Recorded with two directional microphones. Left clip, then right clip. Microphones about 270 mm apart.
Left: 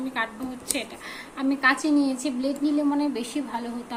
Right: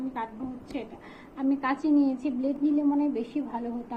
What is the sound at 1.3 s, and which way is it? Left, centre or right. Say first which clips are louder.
A woman's voice: left 6 dB; centre.